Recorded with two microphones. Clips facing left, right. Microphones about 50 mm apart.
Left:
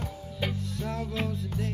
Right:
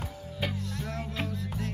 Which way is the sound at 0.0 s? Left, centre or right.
Centre.